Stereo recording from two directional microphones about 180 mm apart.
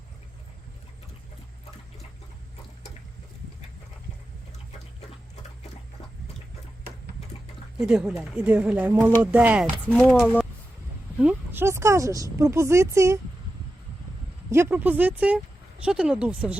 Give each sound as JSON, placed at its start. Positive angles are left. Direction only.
{"t": 7.8, "sound": "speech", "side_deg": -5}
{"t": 10.0, "sound": "speech", "side_deg": 5}
{"t": 11.2, "sound": "speech", "side_deg": -10}
{"t": 14.5, "sound": "speech", "side_deg": -10}